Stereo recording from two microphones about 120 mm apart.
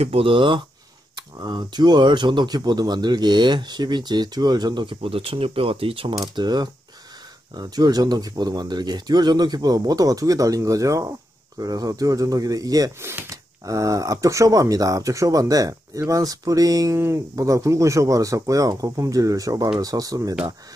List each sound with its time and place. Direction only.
0.0 s speech: 50° right (ahead or behind)
6.1 s speech: 35° right (ahead or behind)